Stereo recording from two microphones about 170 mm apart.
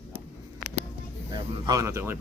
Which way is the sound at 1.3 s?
20° right (ahead or behind).